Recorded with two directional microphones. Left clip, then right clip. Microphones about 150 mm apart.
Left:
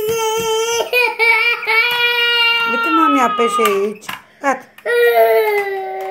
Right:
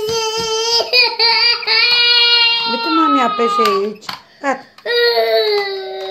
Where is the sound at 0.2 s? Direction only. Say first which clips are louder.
Left 1 dB; 20° right (ahead or behind).